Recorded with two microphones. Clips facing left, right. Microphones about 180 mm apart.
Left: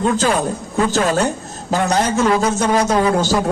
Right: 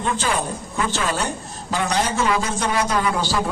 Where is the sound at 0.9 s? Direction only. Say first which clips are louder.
Left 7 dB; 40° left (ahead or behind).